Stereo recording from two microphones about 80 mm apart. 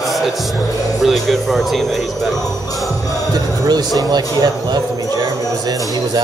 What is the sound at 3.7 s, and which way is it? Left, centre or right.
Speech, right.